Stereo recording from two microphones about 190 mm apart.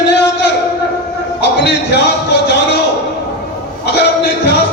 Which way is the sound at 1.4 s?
65° left (ahead or behind).